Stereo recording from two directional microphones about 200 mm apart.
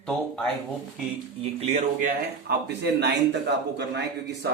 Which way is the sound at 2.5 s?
55° right (ahead or behind).